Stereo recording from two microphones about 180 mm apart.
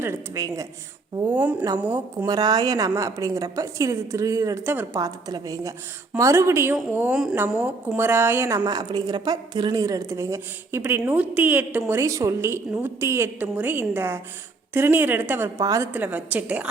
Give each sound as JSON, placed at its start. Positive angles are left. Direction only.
{"t": 0.0, "sound": "a woman's voice", "side_deg": -15}
{"t": 2.2, "sound": "a woman's voice", "side_deg": -20}